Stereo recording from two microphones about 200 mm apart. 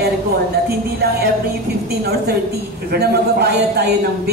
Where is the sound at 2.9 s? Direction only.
55° right (ahead or behind).